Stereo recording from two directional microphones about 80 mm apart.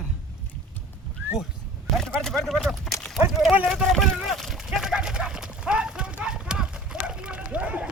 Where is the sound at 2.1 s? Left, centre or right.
Centre.